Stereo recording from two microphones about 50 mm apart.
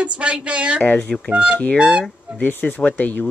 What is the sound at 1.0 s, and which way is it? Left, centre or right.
Speech, centre.